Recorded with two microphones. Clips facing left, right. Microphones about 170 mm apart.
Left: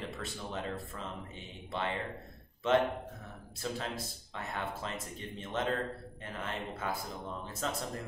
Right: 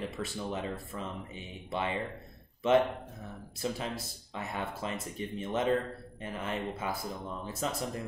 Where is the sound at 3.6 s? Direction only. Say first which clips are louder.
Right 3 dB; 15° right (ahead or behind).